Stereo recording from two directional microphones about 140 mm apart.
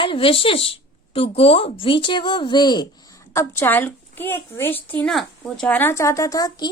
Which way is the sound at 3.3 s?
20° left (ahead or behind).